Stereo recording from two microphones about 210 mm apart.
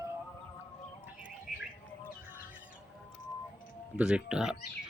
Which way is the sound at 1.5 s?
40° left (ahead or behind).